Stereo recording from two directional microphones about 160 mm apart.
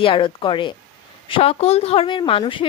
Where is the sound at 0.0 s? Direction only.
30° left (ahead or behind).